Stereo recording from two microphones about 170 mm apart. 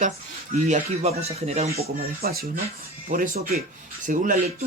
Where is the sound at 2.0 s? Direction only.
65° right (ahead or behind).